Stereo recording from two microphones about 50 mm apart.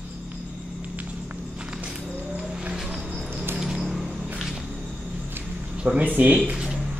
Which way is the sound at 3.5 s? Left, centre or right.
Centre.